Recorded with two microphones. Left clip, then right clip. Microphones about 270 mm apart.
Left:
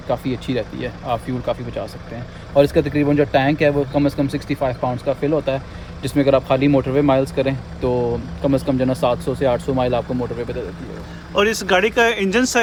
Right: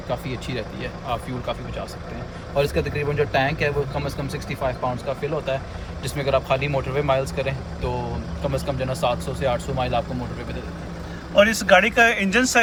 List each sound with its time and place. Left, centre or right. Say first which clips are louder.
0.1 s speech: left 7 dB; left
11.3 s speech: right 1 dB; centre